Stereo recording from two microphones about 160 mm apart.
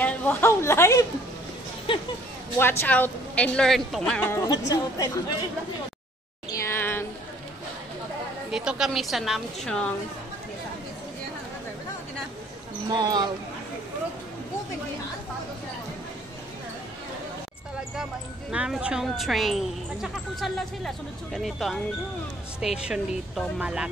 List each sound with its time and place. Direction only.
0.0 s speech: 10° left (ahead or behind)
2.6 s speech: 15° left (ahead or behind)
4.3 s a woman's voice: 20° left (ahead or behind)
6.5 s a sound: 15° left (ahead or behind)
8.5 s speech: 5° right (ahead or behind)
12.9 s speech: 25° right (ahead or behind)
18.5 s speech: 5° right (ahead or behind)